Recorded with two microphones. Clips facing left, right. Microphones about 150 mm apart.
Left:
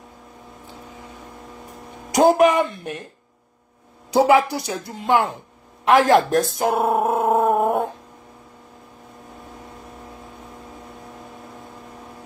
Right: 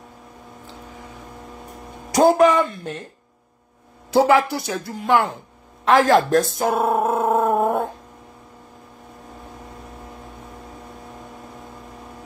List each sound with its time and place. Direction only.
2.1 s speech: 15° left (ahead or behind)
4.1 s speech: 20° left (ahead or behind)